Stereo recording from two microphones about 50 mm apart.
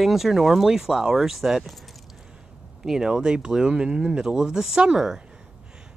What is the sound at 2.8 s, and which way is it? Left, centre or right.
Speech, centre.